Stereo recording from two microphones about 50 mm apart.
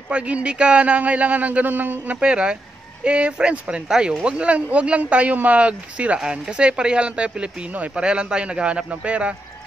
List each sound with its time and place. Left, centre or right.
0.1 s speech: right
2.1 s speech: centre